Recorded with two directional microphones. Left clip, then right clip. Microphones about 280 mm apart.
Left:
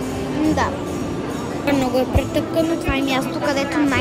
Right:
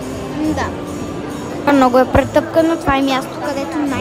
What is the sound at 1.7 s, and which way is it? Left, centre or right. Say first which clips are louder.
Speech: right 8 dB; centre.